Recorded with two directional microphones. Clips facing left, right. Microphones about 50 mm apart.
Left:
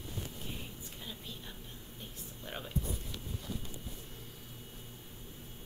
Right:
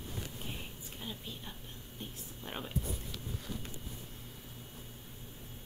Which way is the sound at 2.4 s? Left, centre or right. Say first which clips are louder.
Right 1 dB; centre.